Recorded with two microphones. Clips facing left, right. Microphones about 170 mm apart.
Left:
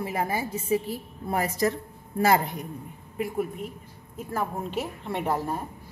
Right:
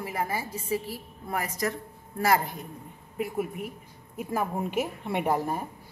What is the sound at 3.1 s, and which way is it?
A woman's voice, 5° right (ahead or behind).